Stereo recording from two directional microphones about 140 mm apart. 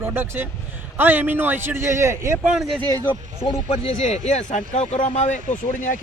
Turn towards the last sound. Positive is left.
turn(degrees=60)  # may be behind; listen again after turning